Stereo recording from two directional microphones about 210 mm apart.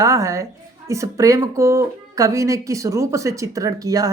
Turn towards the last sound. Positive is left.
turn(degrees=-15)  # may be behind; listen again after turning